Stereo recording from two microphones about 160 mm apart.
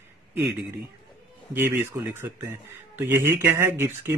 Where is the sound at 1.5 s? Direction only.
15° right (ahead or behind).